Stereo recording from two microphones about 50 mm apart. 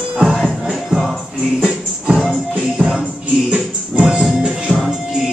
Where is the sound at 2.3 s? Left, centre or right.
Centre.